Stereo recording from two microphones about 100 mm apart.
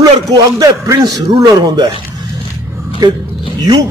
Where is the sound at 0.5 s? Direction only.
40° right (ahead or behind).